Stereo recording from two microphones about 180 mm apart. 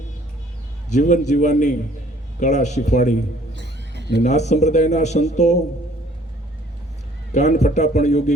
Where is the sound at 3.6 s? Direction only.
75° right (ahead or behind).